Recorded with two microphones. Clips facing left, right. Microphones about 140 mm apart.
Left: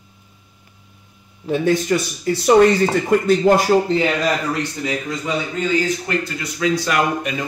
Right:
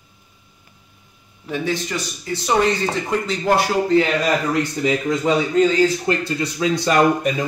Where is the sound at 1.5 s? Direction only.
50° left (ahead or behind).